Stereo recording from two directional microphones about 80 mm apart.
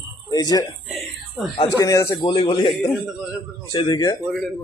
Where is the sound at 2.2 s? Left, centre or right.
Left.